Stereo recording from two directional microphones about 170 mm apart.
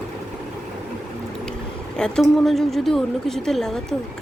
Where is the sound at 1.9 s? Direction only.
5° left (ahead or behind).